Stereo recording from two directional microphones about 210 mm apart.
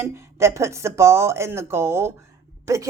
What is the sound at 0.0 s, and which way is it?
A woman's voice, 15° right (ahead or behind).